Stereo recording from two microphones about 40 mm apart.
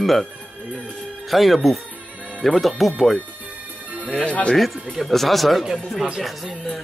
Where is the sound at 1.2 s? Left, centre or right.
Centre.